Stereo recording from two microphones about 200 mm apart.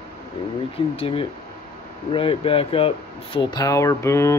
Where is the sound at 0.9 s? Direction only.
25° left (ahead or behind).